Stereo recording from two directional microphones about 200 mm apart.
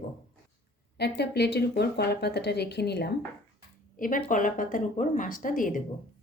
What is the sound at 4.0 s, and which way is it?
Speech, 45° left (ahead or behind).